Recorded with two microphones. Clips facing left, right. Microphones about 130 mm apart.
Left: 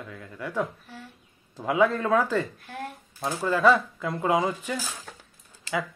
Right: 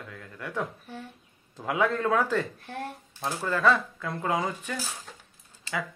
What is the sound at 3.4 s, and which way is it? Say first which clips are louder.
Speech: left 4 dB; 10° left (ahead or behind).